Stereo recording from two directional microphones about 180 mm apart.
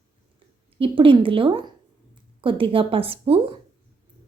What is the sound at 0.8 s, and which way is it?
A woman's voice, 30° right (ahead or behind).